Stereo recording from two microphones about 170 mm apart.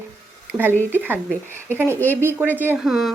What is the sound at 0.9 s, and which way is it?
A woman's voice, 10° right (ahead or behind).